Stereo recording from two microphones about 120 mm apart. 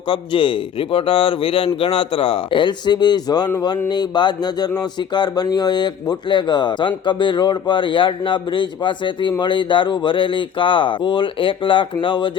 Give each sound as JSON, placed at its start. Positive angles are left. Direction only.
{"t": 0.1, "sound": "a man's voice", "side_deg": 45}